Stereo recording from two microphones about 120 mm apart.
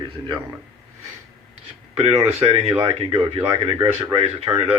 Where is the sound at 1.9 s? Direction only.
60° right (ahead or behind).